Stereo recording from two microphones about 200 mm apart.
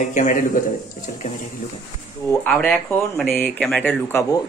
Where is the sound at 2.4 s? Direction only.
5° left (ahead or behind).